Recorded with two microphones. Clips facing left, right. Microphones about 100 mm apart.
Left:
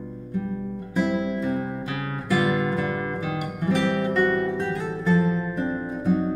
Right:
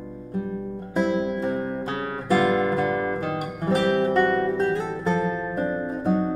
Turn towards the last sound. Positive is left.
turn(degrees=-35)  # may be behind; listen again after turning